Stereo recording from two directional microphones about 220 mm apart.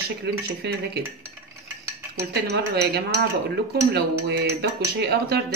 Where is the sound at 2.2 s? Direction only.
45° right (ahead or behind).